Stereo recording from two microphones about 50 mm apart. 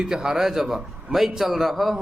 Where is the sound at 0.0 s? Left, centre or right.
Centre.